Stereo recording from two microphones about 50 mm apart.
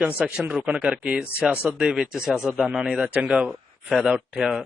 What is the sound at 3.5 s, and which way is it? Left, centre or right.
Speech, centre.